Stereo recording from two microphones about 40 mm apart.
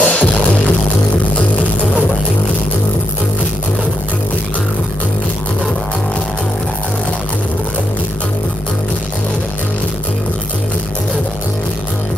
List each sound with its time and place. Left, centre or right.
0.0 s music: left